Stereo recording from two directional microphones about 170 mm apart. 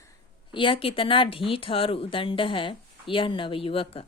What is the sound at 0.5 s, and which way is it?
Speech, 30° left (ahead or behind).